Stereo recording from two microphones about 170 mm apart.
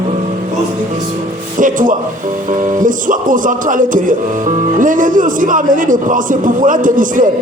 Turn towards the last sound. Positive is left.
turn(degrees=-50)  # may be behind; listen again after turning